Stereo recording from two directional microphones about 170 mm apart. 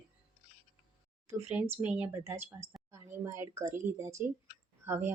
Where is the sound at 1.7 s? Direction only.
10° right (ahead or behind).